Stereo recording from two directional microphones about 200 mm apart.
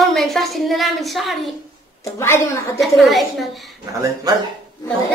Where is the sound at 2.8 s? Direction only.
Centre (ahead or behind).